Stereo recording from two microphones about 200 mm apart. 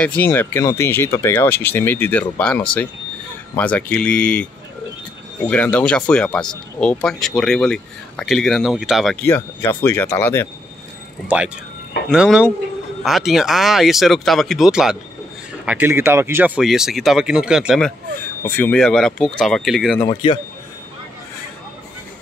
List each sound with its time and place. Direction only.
0.0 s speech: 10° left (ahead or behind)
5.5 s speech: 5° left (ahead or behind)
9.2 s speech: 10° left (ahead or behind)
11.2 s speech: 5° right (ahead or behind)
20.1 s speech: 25° left (ahead or behind)